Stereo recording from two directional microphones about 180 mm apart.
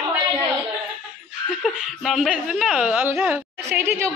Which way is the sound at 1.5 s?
5° right (ahead or behind).